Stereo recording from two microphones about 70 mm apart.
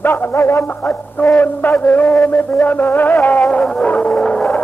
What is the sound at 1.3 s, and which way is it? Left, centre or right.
Music, left.